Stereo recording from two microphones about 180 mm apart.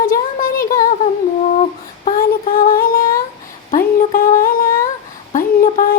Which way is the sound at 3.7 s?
50° left (ahead or behind).